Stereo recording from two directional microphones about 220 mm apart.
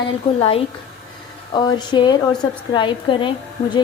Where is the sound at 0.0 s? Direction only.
25° left (ahead or behind).